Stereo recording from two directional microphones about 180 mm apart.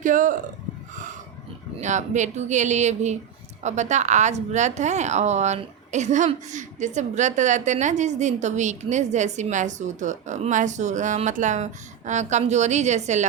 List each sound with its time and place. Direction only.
0.0 s speech: 45° right (ahead or behind)
1.8 s a woman's voice: 40° right (ahead or behind)